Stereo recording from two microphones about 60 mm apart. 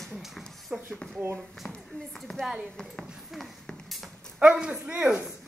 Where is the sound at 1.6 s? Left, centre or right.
Centre.